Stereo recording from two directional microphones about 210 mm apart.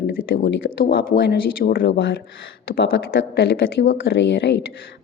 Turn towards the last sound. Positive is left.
turn(degrees=55)  # may be behind; listen again after turning